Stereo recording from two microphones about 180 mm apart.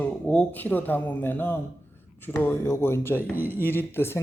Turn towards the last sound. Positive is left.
turn(degrees=15)  # may be behind; listen again after turning